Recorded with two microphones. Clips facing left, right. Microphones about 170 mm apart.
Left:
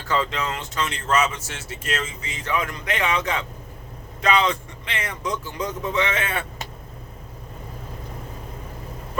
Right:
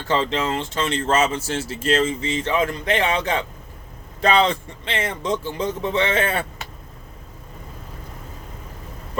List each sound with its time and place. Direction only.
0.1 s speech: 25° right (ahead or behind)